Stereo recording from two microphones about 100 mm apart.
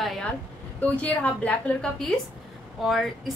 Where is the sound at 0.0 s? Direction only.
Centre (ahead or behind).